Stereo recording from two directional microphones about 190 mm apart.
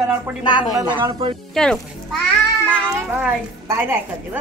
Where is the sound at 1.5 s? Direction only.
5° left (ahead or behind).